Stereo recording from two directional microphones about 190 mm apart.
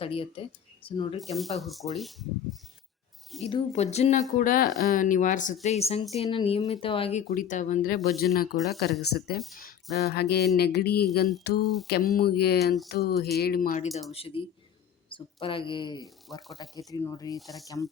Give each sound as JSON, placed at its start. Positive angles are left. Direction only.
{"t": 0.0, "sound": "speech", "side_deg": 30}
{"t": 1.4, "sound": "speech", "side_deg": 0}
{"t": 3.4, "sound": "speech", "side_deg": 35}
{"t": 4.4, "sound": "speech", "side_deg": 50}
{"t": 14.1, "sound": "speech", "side_deg": 30}
{"t": 17.4, "sound": "speech", "side_deg": 0}